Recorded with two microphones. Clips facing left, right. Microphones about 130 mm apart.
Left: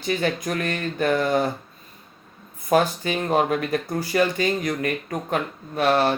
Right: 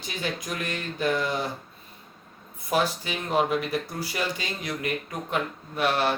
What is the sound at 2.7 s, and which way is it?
Speech, 50° left (ahead or behind).